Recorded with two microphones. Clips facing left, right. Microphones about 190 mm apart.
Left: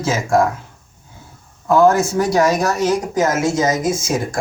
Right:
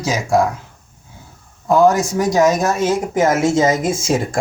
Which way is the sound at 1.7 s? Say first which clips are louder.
Even; 15° right (ahead or behind).